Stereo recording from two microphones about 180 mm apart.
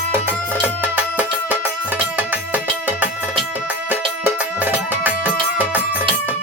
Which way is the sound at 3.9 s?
10° right (ahead or behind).